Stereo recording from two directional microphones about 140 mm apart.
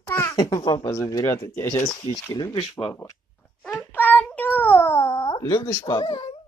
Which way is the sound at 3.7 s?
15° left (ahead or behind).